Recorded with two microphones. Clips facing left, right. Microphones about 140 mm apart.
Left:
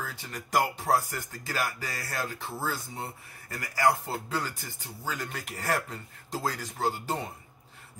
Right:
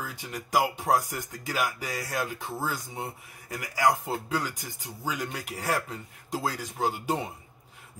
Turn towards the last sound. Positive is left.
turn(degrees=-15)  # may be behind; listen again after turning